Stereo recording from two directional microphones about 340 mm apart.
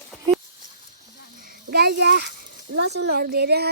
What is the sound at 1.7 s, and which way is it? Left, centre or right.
A child's voice, right.